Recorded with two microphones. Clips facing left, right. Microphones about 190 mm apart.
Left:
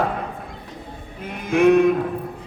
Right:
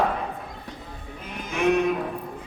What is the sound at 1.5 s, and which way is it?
Speech, 55° left (ahead or behind).